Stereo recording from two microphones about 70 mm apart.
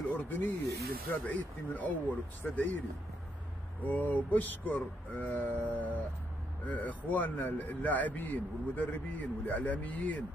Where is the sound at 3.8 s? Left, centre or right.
Left.